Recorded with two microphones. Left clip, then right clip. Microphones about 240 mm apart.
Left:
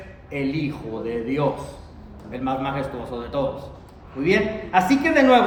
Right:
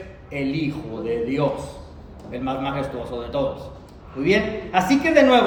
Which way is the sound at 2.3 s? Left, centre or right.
Centre.